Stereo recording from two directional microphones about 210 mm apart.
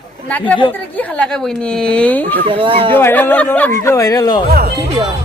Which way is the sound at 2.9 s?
10° left (ahead or behind).